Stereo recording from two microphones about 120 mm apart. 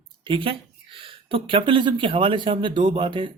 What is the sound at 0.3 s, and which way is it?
A man's voice, 45° right (ahead or behind).